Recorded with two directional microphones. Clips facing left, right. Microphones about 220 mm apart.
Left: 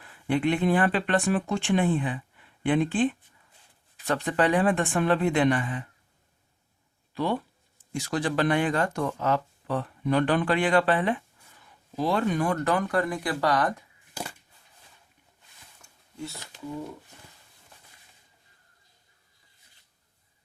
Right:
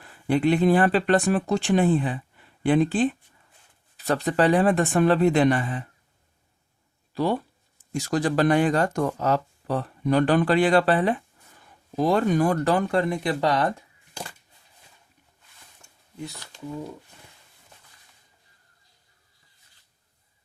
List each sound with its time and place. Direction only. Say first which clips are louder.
0.0 s speech: right 3 dB; 40° right (ahead or behind)
7.1 s speech: right 3 dB; 35° right (ahead or behind)
15.8 s a sound: right 1 dB; 20° right (ahead or behind)